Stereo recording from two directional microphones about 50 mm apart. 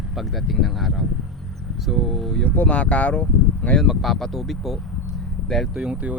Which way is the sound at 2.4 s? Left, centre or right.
Left.